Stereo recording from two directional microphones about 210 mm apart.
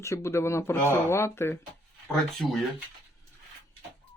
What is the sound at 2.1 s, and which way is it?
Speech, centre (ahead or behind).